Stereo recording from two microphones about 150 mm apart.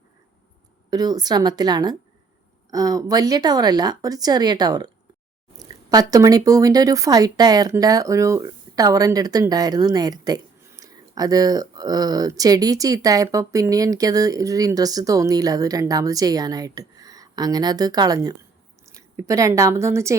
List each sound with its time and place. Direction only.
0.9 s a woman's voice: 25° right (ahead or behind)